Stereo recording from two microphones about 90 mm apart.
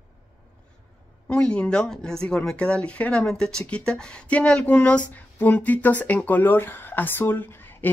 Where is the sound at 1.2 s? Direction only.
10° left (ahead or behind).